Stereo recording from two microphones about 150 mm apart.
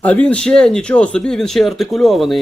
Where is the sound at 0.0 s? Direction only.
10° left (ahead or behind).